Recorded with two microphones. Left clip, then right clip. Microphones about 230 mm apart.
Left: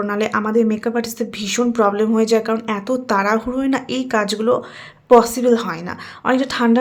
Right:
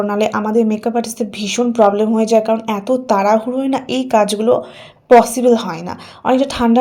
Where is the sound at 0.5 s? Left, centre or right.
Left.